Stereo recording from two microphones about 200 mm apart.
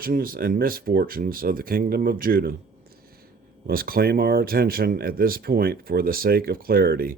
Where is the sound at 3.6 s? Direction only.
45° right (ahead or behind).